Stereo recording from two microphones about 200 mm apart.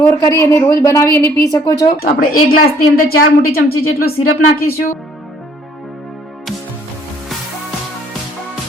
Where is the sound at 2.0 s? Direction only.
50° left (ahead or behind).